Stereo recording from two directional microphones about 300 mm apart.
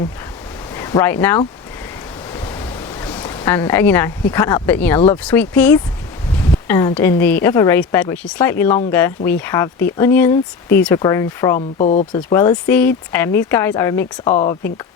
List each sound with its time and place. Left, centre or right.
0.8 s speech: centre
3.0 s a sound: centre
4.3 s speech: centre
11.8 s speech: left
12.1 s speech: centre